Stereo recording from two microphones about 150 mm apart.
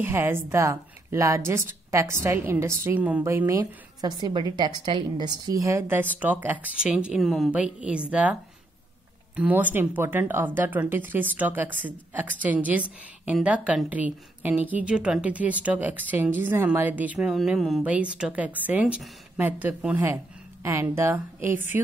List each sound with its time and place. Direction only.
0.0 s a woman's voice: 15° right (ahead or behind)